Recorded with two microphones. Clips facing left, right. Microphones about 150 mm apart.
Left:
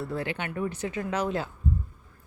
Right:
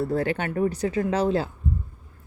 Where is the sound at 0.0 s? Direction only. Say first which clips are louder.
Right 7 dB; 40° right (ahead or behind).